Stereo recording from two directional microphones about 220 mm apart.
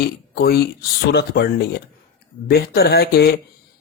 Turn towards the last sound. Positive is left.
turn(degrees=45)  # may be behind; listen again after turning